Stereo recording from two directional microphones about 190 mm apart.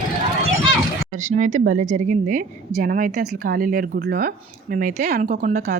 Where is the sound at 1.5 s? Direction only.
40° right (ahead or behind).